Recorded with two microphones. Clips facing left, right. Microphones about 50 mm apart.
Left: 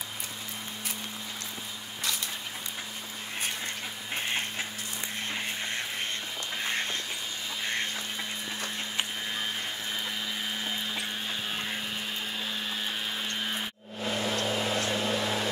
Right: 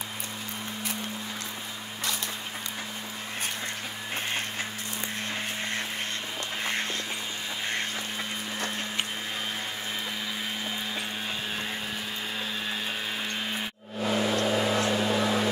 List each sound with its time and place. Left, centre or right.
14.0 s vehicle: right